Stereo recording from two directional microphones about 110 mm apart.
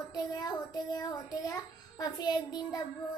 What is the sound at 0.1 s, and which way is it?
A child's voice, 35° left (ahead or behind).